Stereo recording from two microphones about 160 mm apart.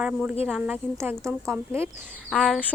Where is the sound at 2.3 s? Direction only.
Centre (ahead or behind).